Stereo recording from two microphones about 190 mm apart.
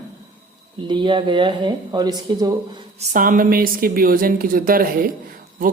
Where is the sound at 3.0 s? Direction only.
45° right (ahead or behind).